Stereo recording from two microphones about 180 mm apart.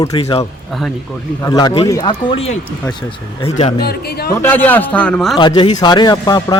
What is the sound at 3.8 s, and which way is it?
Speech, 60° left (ahead or behind).